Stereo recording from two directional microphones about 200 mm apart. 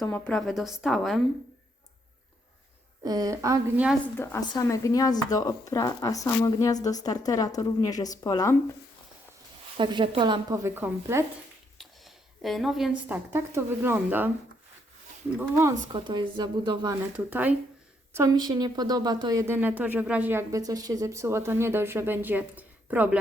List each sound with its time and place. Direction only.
0.0 s a woman's voice: 5° left (ahead or behind)
3.0 s a woman's voice: 20° right (ahead or behind)
4.2 s speech: 15° left (ahead or behind)
9.7 s speech: 25° right (ahead or behind)
11.8 s a woman's voice: centre (ahead or behind)
15.4 s speech: 15° right (ahead or behind)
17.2 s a woman's voice: 10° right (ahead or behind)